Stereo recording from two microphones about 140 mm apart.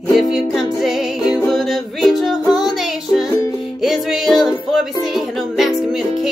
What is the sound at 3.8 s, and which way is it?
Music, centre (ahead or behind).